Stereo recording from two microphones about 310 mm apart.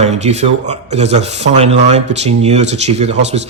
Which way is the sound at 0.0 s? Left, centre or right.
Right.